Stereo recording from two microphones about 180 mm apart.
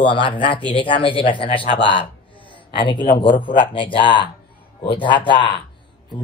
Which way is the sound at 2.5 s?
25° left (ahead or behind).